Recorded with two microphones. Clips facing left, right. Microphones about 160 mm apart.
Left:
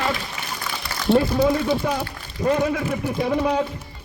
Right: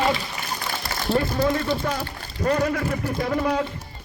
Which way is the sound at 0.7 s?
25° right (ahead or behind).